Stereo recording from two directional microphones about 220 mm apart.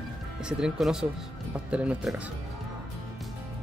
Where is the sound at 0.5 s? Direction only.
5° right (ahead or behind).